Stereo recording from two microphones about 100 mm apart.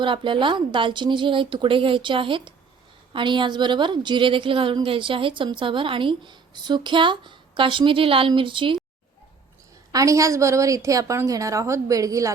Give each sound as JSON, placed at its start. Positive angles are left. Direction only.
{"t": 0.0, "sound": "a woman's voice", "side_deg": -55}
{"t": 9.9, "sound": "a woman's voice", "side_deg": -35}